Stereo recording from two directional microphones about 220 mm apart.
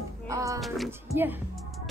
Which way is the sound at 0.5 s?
Centre (ahead or behind).